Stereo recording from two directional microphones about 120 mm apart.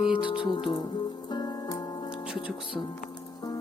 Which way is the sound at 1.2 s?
35° left (ahead or behind).